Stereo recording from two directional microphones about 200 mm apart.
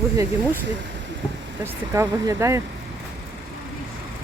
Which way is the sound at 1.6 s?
15° right (ahead or behind).